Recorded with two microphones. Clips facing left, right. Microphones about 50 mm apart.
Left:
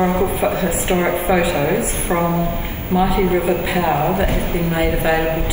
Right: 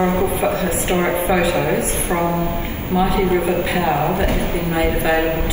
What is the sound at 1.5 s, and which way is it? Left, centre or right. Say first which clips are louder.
Speech: left 1 dB; left.